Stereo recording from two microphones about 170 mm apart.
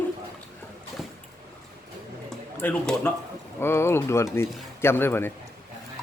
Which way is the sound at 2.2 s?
5° left (ahead or behind).